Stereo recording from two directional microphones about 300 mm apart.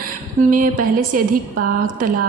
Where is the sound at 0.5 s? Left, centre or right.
Right.